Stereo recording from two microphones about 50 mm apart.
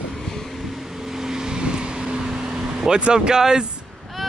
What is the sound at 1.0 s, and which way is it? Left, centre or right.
Vehicle, centre.